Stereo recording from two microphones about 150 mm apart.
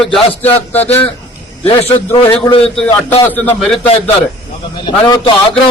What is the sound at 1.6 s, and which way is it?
A man's voice, 35° left (ahead or behind).